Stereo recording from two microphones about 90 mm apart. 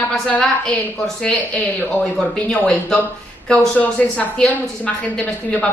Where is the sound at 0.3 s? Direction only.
15° left (ahead or behind).